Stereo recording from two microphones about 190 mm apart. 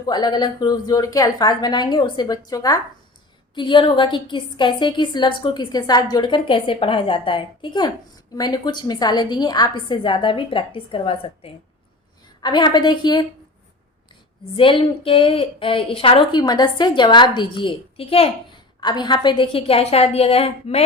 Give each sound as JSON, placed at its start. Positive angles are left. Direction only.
{"t": 0.1, "sound": "a woman's voice", "side_deg": 20}
{"t": 14.5, "sound": "a woman's voice", "side_deg": 30}